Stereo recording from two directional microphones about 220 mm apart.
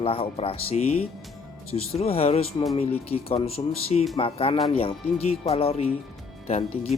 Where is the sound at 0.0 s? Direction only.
25° left (ahead or behind).